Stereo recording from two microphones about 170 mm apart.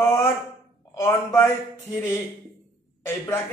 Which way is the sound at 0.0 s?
15° left (ahead or behind).